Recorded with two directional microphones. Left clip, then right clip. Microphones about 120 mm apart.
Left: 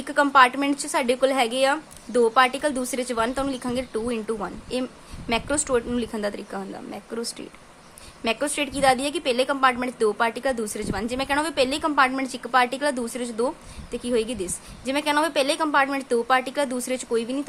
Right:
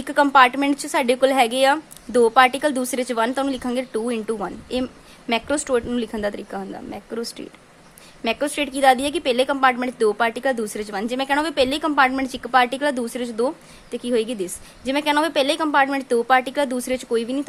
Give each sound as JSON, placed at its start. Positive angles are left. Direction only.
{"t": 0.0, "sound": "a woman's voice", "side_deg": -30}